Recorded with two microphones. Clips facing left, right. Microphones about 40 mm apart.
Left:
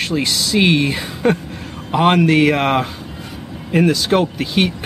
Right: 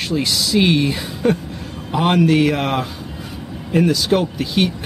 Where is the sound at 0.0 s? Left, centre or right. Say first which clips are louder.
Left 1 dB; centre.